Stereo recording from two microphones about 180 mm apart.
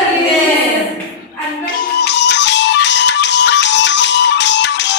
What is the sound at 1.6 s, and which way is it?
Music, 70° left (ahead or behind).